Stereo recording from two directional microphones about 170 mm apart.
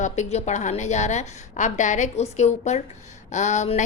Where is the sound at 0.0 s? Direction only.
40° left (ahead or behind).